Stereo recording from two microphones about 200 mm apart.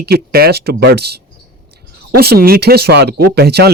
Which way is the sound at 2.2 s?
50° right (ahead or behind).